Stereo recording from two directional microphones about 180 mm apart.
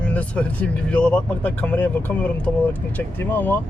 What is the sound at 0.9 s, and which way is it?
Speech, 5° left (ahead or behind).